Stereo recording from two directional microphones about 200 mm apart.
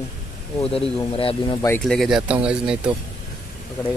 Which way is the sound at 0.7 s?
30° left (ahead or behind).